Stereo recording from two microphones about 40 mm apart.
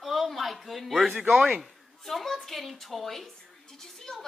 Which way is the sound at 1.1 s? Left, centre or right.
Right.